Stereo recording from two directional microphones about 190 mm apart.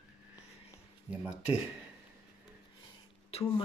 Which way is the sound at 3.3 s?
30° left (ahead or behind).